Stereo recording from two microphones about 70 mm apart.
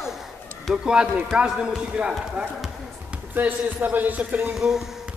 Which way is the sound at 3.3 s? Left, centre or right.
Right.